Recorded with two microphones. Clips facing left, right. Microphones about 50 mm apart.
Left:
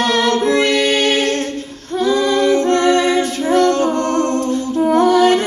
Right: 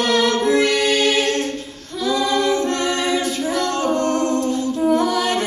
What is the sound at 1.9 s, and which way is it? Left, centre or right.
A capella, left.